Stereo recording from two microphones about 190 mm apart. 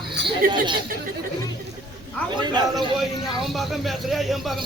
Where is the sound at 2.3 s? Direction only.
25° right (ahead or behind).